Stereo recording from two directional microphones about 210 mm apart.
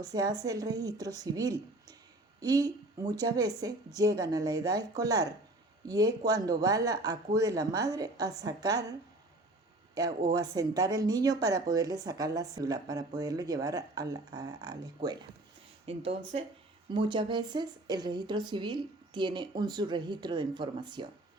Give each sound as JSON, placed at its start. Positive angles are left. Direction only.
{"t": 0.0, "sound": "speech", "side_deg": -20}
{"t": 10.3, "sound": "a woman's voice", "side_deg": -15}